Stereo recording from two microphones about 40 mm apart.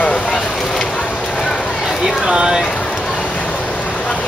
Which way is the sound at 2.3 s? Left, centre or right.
Centre.